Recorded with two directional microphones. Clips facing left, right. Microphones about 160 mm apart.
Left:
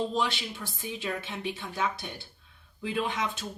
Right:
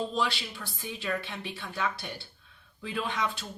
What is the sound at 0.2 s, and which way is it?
Speech, 20° left (ahead or behind).